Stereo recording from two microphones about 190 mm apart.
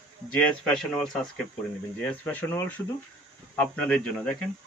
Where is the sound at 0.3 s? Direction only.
Centre (ahead or behind).